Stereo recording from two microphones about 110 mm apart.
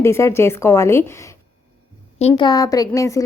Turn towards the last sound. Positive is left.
turn(degrees=30)  # may be behind; listen again after turning